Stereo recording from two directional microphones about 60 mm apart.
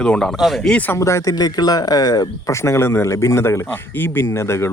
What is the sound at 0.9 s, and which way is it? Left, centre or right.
Speech, left.